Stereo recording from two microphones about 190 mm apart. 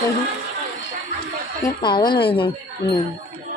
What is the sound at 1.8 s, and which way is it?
Speech, 25° left (ahead or behind).